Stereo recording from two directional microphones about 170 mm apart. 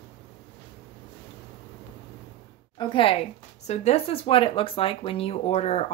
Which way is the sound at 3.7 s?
40° left (ahead or behind).